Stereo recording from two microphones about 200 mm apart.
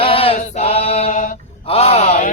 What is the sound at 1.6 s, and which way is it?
Male singing, 30° left (ahead or behind).